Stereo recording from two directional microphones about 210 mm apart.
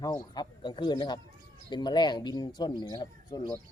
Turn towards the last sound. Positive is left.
turn(degrees=20)  # may be behind; listen again after turning